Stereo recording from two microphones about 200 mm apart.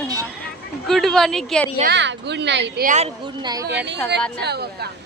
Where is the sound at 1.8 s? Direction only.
55° right (ahead or behind).